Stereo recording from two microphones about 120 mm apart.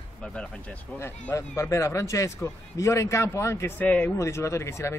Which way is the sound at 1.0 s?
25° left (ahead or behind).